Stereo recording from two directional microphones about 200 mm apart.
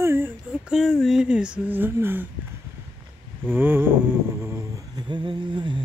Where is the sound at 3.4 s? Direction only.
10° right (ahead or behind).